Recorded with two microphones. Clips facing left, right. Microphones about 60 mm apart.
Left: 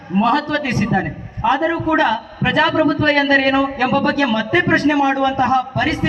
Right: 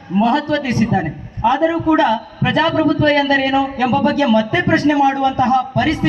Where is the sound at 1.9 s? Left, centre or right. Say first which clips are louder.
Even; left.